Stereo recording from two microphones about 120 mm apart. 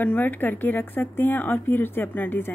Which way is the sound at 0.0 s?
15° left (ahead or behind).